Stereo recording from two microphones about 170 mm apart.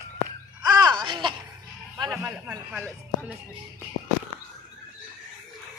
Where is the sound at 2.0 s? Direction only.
10° right (ahead or behind).